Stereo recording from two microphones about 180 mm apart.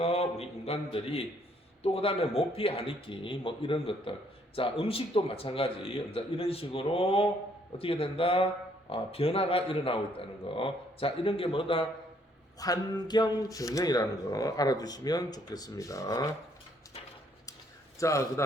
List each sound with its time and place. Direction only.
0.0 s a man's voice: 35° left (ahead or behind); by 16.3 s 20° left (ahead or behind)
18.0 s a man's voice: 15° left (ahead or behind)